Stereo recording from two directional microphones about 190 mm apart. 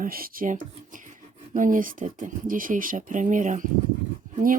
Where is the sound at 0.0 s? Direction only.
50° right (ahead or behind).